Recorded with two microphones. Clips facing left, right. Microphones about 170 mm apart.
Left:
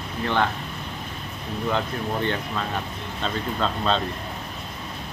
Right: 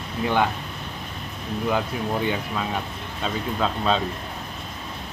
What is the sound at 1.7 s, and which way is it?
Speech, 10° right (ahead or behind).